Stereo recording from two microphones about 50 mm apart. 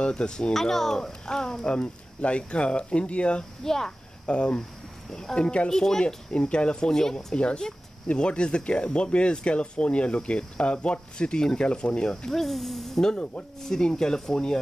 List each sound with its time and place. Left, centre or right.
0.0 s speech: centre
3.6 s speech: centre
4.3 s speech: left
12.3 s speech: centre
13.1 s speech: left
13.6 s speech: centre